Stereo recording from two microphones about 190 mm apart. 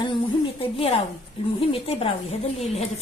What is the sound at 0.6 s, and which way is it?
A woman's voice, 30° left (ahead or behind).